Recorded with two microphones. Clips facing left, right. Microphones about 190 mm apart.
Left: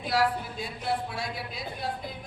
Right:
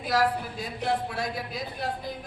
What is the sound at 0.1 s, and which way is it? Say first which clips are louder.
A man's voice: right 1 dB; 45° right (ahead or behind).